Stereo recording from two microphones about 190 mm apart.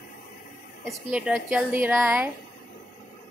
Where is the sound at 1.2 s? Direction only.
Centre (ahead or behind).